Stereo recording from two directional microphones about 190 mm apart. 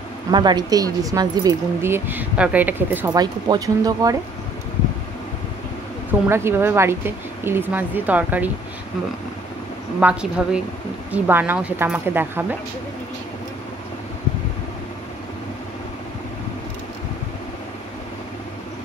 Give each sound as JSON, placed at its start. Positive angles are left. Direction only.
{"t": 0.3, "sound": "speech", "side_deg": -20}
{"t": 3.1, "sound": "speech", "side_deg": -20}
{"t": 6.2, "sound": "speech", "side_deg": -10}
{"t": 9.9, "sound": "a woman's voice", "side_deg": -5}